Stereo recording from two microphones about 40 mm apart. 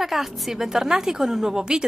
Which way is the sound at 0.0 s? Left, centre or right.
Centre.